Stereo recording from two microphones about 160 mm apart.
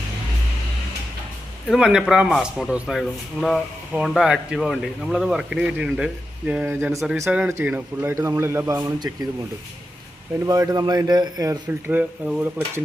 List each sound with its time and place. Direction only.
1.6 s a man's voice: 5° right (ahead or behind)
10.4 s speech: 20° right (ahead or behind)
11.9 s a man's voice: 10° right (ahead or behind)